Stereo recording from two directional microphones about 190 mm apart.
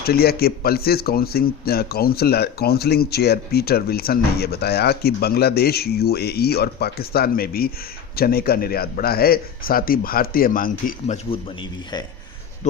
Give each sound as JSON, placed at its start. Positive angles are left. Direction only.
{"t": 0.0, "sound": "a man's voice", "side_deg": 55}